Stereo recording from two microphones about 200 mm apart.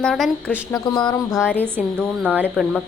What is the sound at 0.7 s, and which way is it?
Speech, 20° left (ahead or behind).